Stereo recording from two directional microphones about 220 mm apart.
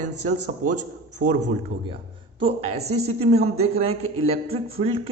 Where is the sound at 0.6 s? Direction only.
90° right.